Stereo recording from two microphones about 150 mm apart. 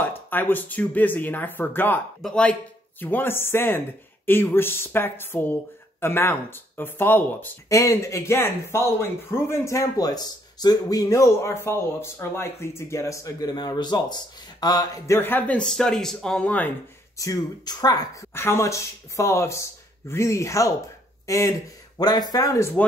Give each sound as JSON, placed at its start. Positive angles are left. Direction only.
{"t": 0.3, "sound": "speech", "side_deg": 15}
{"t": 17.2, "sound": "speech", "side_deg": 25}